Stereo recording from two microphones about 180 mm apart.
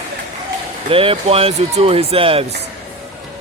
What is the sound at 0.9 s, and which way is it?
Speech, 30° right (ahead or behind).